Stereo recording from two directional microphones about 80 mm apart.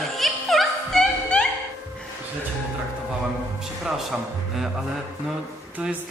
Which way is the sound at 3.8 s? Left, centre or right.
Centre.